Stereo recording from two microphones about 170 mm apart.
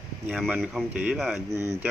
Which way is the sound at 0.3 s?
Centre (ahead or behind).